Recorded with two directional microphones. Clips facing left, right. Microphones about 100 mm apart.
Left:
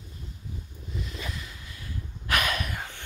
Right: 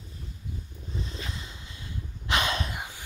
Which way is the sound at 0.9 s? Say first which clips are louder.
Left 1 dB; 30° right (ahead or behind).